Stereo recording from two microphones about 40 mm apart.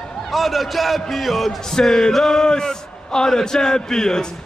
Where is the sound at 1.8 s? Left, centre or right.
Centre.